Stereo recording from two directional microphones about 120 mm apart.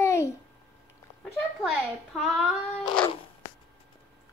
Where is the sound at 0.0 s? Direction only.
25° left (ahead or behind).